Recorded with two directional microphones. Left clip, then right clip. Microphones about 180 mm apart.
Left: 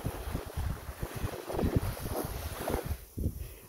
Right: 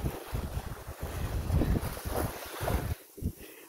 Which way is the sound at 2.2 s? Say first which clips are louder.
Right 3 dB; 50° right (ahead or behind).